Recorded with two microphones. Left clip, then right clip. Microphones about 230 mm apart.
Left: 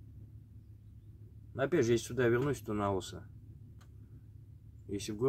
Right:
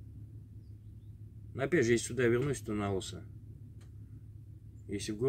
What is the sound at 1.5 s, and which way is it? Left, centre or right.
Speech, centre.